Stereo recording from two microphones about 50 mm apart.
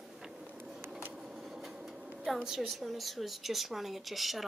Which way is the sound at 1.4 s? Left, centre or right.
Centre.